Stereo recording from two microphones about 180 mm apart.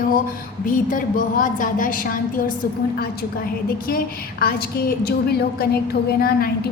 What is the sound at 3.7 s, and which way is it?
A woman's voice, 55° left (ahead or behind).